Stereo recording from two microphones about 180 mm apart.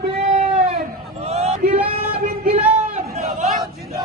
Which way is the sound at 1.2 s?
35° right (ahead or behind).